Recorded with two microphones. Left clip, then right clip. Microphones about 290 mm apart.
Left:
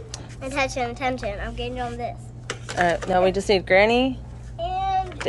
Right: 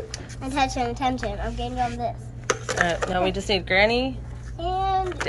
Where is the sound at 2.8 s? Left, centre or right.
Centre.